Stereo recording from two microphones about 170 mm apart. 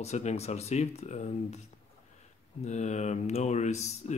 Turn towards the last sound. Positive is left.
turn(degrees=40)  # may be behind; listen again after turning